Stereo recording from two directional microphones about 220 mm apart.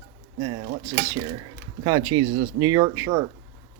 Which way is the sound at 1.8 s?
20° right (ahead or behind).